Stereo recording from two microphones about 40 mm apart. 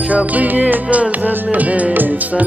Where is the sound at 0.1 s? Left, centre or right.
Right.